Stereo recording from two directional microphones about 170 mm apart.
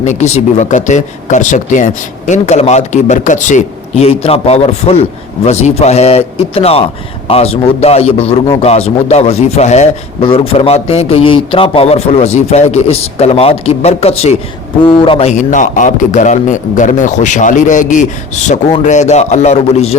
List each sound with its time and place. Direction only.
0.0 s a man's voice: 45° left (ahead or behind)